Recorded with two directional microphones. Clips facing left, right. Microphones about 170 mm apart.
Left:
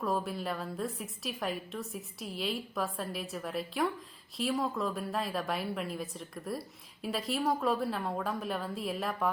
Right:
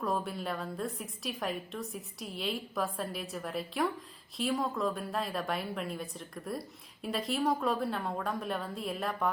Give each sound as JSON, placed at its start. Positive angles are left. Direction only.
{"t": 0.0, "sound": "a woman's voice", "side_deg": 0}